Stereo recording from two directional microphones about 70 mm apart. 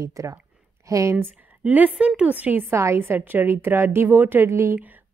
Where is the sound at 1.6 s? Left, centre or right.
Right.